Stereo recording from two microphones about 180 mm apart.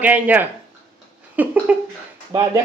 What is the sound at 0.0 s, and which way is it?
Speech, 10° right (ahead or behind).